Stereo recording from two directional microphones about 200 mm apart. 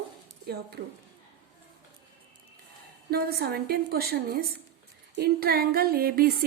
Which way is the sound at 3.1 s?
50° right (ahead or behind).